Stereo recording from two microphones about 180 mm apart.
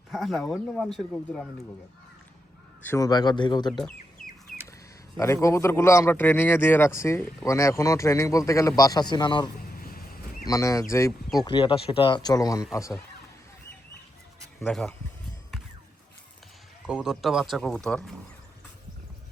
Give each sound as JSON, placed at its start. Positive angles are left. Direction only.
{"t": 0.1, "sound": "speech", "side_deg": 0}
{"t": 2.8, "sound": "speech", "side_deg": 15}
{"t": 5.1, "sound": "speech", "side_deg": 15}
{"t": 9.8, "sound": "a sound", "side_deg": 55}
{"t": 10.4, "sound": "speech", "side_deg": 15}
{"t": 11.3, "sound": "speech", "side_deg": 25}
{"t": 14.7, "sound": "speech", "side_deg": 0}
{"t": 16.8, "sound": "speech", "side_deg": -5}